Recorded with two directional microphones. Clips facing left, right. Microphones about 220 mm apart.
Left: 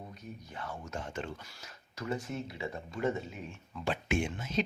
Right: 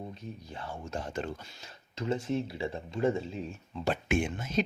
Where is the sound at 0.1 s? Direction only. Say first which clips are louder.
Right 3 dB; 25° right (ahead or behind).